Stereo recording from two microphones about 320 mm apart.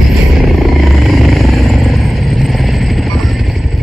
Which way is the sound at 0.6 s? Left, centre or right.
Centre.